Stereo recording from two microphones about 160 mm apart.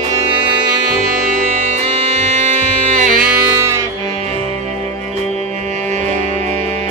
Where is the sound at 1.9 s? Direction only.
40° right (ahead or behind).